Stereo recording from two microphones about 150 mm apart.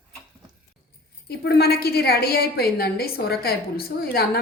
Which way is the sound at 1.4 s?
90° left.